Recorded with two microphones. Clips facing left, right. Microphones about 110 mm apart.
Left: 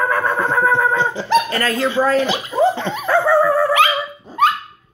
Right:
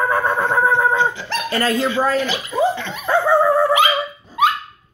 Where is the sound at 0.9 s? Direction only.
35° left (ahead or behind).